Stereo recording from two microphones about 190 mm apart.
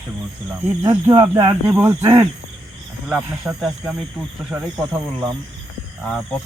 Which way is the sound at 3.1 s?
5° right (ahead or behind).